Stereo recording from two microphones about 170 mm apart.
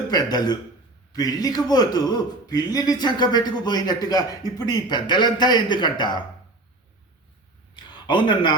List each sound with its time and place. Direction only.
0.1 s speech: 25° left (ahead or behind)
7.9 s speech: 25° left (ahead or behind)